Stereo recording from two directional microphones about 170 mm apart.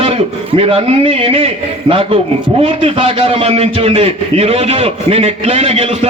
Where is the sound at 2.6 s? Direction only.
30° right (ahead or behind).